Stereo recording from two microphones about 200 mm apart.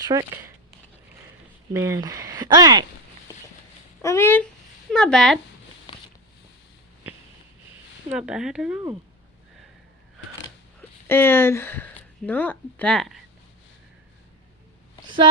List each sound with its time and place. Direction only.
0.0 s speech: 15° right (ahead or behind)
1.7 s speech: 15° right (ahead or behind)
4.0 s speech: 15° left (ahead or behind)
8.1 s speech: 5° right (ahead or behind)
10.8 s speech: 10° left (ahead or behind)